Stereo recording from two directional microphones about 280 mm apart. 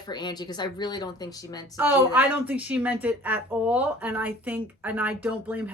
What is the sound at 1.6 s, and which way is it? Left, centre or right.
A woman's voice, centre.